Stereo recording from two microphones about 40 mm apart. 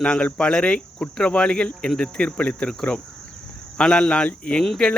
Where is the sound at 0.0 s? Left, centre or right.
Left.